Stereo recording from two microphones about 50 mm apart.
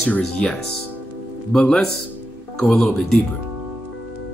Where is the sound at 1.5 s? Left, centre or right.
Centre.